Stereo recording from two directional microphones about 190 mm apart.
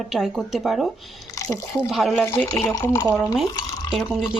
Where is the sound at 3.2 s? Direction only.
Centre (ahead or behind).